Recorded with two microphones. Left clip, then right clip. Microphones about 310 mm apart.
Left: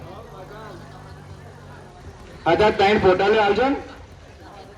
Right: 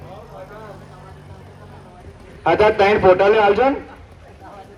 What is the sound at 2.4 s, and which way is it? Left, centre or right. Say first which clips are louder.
Speech: right 3 dB; right.